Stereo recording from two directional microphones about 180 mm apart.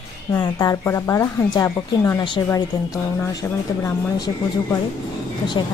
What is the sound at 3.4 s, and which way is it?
Speech, 10° left (ahead or behind).